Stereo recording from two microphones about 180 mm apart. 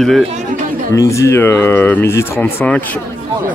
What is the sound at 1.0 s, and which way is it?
Speech, 15° left (ahead or behind).